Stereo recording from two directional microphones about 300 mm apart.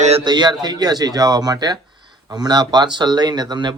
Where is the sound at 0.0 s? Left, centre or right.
Centre.